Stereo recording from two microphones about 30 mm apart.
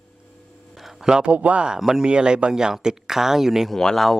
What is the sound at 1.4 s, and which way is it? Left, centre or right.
Speech, right.